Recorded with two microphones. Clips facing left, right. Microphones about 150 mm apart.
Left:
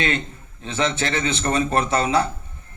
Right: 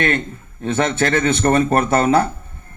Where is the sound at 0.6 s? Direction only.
55° right (ahead or behind).